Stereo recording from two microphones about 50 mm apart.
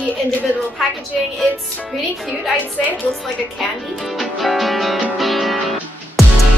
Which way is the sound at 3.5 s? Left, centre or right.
Centre.